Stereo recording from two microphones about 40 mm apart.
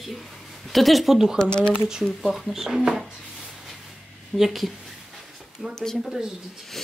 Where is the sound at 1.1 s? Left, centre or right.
Centre.